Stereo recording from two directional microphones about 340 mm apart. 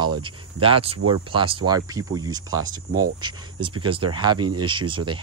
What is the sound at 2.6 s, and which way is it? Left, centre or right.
Speech, right.